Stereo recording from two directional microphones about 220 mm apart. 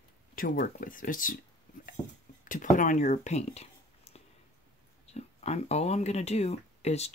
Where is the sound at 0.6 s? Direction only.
40° left (ahead or behind).